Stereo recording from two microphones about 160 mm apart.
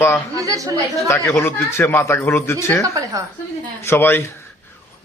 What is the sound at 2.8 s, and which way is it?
Speech, 20° right (ahead or behind).